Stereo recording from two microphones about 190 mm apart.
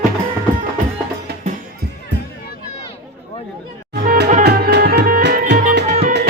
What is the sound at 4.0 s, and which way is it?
Music, 45° right (ahead or behind).